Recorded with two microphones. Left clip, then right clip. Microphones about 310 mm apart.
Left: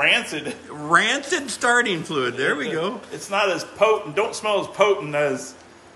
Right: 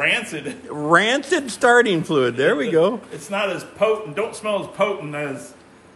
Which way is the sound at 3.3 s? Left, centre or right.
Centre.